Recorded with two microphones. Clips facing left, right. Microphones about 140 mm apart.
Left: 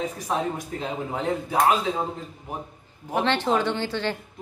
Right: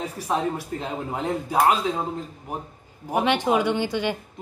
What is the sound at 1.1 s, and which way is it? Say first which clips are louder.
Speech: right 1 dB; 10° right (ahead or behind).